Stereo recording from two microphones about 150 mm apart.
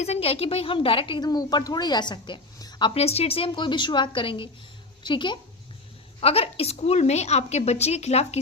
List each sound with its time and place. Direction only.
0.0 s a woman's voice: 45° left (ahead or behind)
6.1 s a woman's voice: 40° left (ahead or behind)